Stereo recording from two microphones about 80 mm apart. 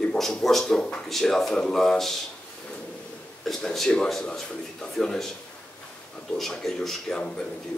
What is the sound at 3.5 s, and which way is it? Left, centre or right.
A man's voice, centre.